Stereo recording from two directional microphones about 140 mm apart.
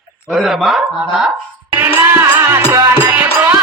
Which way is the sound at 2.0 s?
15° right (ahead or behind).